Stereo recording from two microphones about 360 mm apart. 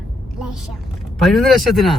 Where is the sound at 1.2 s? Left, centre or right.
Centre.